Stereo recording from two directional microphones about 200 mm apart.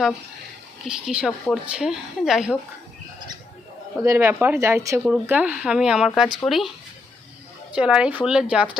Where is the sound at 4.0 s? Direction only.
15° right (ahead or behind).